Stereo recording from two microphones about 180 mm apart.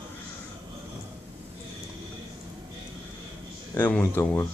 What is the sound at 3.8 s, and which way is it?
Speech, 10° left (ahead or behind).